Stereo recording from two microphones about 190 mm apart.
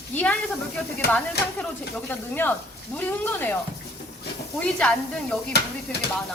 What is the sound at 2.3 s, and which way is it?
Speech, 10° left (ahead or behind).